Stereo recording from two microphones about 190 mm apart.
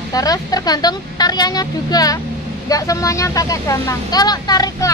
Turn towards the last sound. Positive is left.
turn(degrees=20)  # may be behind; listen again after turning